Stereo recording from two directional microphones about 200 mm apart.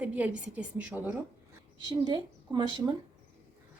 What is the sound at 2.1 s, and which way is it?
Speech, 20° right (ahead or behind).